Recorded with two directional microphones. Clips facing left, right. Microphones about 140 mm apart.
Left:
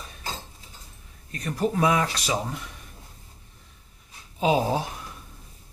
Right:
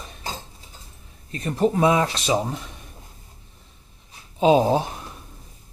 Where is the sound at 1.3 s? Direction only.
25° right (ahead or behind).